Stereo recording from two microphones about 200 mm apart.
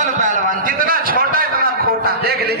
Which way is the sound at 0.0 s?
40° right (ahead or behind).